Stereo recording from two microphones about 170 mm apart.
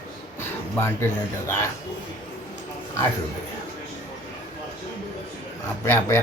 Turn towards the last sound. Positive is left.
turn(degrees=15)  # may be behind; listen again after turning